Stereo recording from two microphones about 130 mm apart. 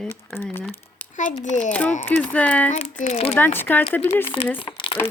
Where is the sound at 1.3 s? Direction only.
65° left (ahead or behind).